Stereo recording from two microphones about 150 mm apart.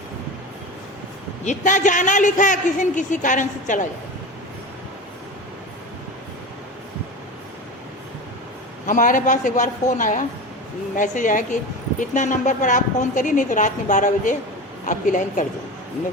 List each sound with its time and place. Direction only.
1.5 s a woman's voice: 55° left (ahead or behind)
8.9 s a woman's voice: 60° left (ahead or behind)